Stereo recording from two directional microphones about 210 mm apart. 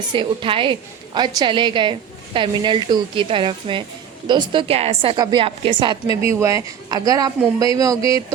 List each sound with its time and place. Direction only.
0.1 s a woman's voice: 25° right (ahead or behind)